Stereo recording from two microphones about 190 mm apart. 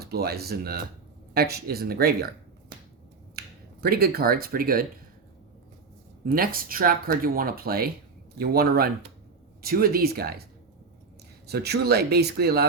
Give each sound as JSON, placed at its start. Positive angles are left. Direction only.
{"t": 0.0, "sound": "speech", "side_deg": -55}
{"t": 3.3, "sound": "speech", "side_deg": -55}
{"t": 6.2, "sound": "speech", "side_deg": -50}
{"t": 11.4, "sound": "speech", "side_deg": -60}